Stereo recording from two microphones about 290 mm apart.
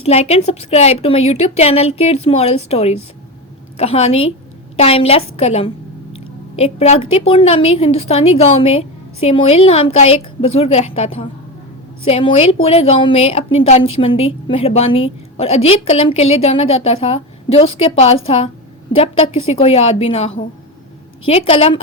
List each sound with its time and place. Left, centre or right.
0.0 s a woman's voice: left